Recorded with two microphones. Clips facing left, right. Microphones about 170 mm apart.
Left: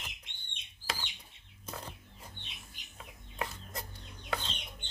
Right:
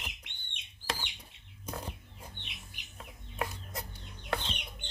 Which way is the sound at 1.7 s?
10° right (ahead or behind).